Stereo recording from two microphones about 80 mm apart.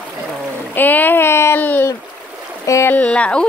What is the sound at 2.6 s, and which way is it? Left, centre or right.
Speech, left.